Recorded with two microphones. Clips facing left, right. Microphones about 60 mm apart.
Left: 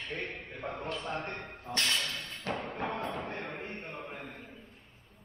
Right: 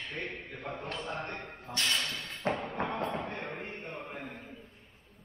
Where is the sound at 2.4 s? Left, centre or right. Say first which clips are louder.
Right 4 dB; right.